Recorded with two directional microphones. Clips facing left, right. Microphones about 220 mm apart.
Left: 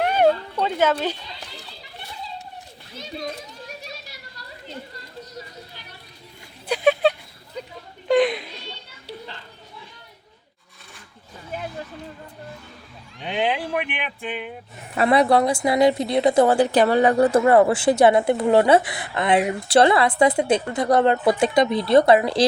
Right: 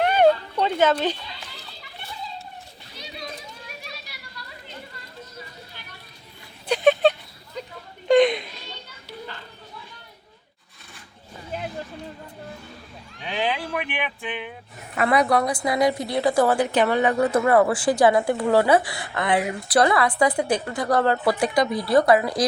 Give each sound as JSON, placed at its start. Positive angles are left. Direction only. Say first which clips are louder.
{"t": 0.0, "sound": "a sound", "louder": "right 1 dB", "side_deg": 10}
{"t": 0.6, "sound": "speech", "louder": "right 1 dB", "side_deg": 10}
{"t": 6.7, "sound": "a sound", "louder": "right 1 dB", "side_deg": 5}
{"t": 8.0, "sound": "children playing", "louder": "right 2 dB", "side_deg": 5}
{"t": 14.3, "sound": "speech", "louder": "left 2 dB", "side_deg": 10}
{"t": 14.9, "sound": "a woman's voice", "louder": "left 3 dB", "side_deg": 30}